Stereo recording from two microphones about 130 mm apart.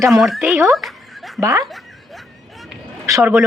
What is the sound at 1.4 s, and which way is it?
Speech, 25° right (ahead or behind).